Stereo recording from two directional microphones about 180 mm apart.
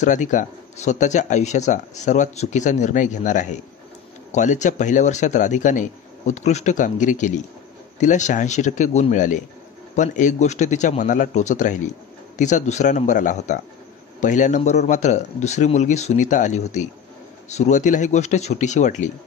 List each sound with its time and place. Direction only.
0.0 s a man's voice: 45° left (ahead or behind)